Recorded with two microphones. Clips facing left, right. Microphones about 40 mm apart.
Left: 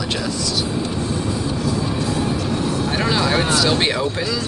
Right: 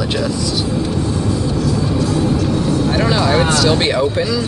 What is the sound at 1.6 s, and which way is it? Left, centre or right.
Music, centre.